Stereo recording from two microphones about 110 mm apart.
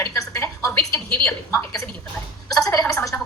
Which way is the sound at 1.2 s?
25° left (ahead or behind).